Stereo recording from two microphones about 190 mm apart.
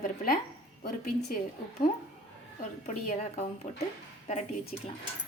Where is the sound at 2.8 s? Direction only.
35° left (ahead or behind).